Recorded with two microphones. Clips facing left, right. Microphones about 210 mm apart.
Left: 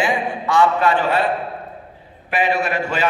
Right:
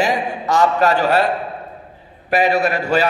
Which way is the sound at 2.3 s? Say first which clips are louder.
Right 4 dB; 40° right (ahead or behind).